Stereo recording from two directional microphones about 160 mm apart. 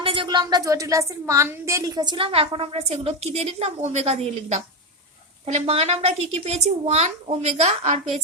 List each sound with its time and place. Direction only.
0.0 s a woman's voice: 30° right (ahead or behind)